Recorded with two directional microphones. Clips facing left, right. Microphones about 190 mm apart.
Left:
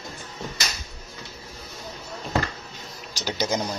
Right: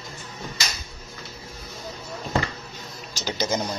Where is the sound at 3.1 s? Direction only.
10° left (ahead or behind).